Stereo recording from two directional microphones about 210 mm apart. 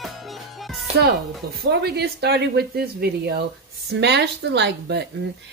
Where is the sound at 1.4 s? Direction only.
45° right (ahead or behind).